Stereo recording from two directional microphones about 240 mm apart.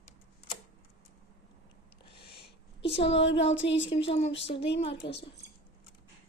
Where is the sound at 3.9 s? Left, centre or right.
Left.